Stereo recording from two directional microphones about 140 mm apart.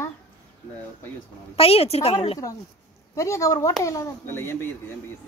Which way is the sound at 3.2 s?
20° left (ahead or behind).